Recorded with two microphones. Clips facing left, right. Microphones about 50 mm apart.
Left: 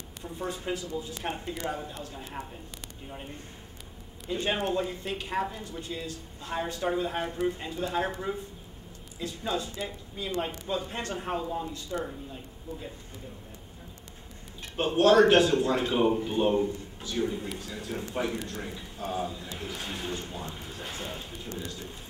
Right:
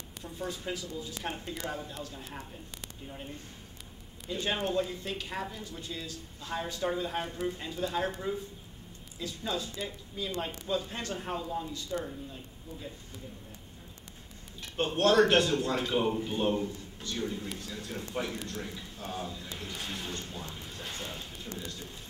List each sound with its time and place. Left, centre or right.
0.2 s speech: left
4.4 s speech: centre
5.6 s speech: left
14.8 s speech: centre
20.5 s a sound: centre
21.5 s speech: centre